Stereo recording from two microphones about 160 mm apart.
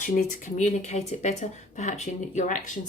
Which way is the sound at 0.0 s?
55° left (ahead or behind).